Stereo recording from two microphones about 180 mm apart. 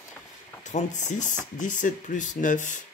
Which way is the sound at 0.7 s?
40° left (ahead or behind).